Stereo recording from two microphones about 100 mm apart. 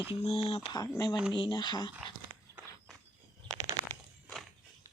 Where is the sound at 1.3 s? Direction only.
50° left (ahead or behind).